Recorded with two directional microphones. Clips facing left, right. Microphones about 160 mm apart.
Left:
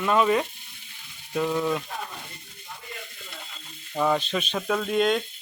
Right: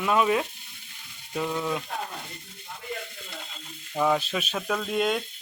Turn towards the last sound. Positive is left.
turn(degrees=-5)  # may be behind; listen again after turning